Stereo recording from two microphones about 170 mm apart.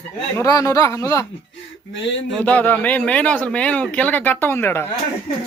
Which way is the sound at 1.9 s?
90° left.